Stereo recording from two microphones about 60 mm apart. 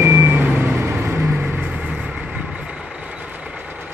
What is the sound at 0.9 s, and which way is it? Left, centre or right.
Vehicle, right.